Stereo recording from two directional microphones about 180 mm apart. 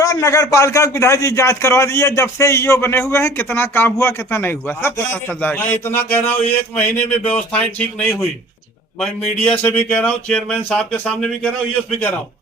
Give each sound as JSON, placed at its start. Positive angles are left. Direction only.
{"t": 0.0, "sound": "speech", "side_deg": 20}
{"t": 9.5, "sound": "speech", "side_deg": 5}